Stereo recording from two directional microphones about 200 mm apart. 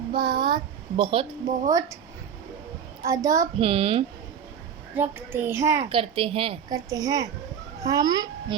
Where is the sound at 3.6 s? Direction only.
25° right (ahead or behind).